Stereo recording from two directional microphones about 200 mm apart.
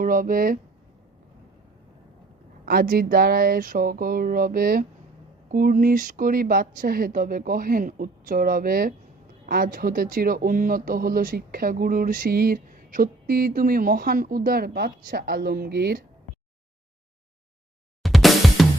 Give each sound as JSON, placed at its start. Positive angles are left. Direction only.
{"t": 0.0, "sound": "speech", "side_deg": -45}
{"t": 2.6, "sound": "speech", "side_deg": -45}
{"t": 18.0, "sound": "music", "side_deg": 0}